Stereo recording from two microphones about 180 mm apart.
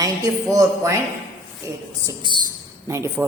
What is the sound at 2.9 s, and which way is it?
Speech, 15° right (ahead or behind).